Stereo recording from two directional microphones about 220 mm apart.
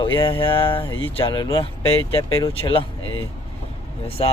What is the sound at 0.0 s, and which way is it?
Speech, 25° left (ahead or behind).